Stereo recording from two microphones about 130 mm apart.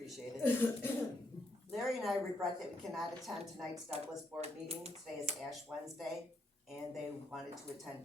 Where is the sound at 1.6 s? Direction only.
Centre (ahead or behind).